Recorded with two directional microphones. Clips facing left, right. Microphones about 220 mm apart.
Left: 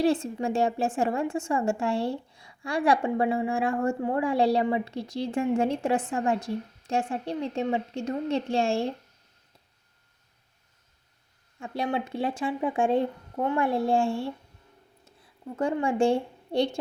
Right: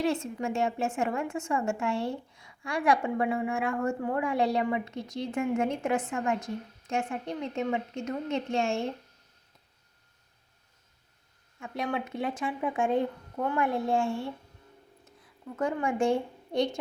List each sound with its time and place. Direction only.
0.0 s a woman's voice: 30° left (ahead or behind)
11.6 s a woman's voice: 30° left (ahead or behind)
15.5 s a woman's voice: 30° left (ahead or behind)